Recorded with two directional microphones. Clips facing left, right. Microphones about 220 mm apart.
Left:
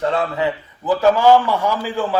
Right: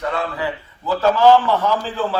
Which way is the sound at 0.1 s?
20° left (ahead or behind).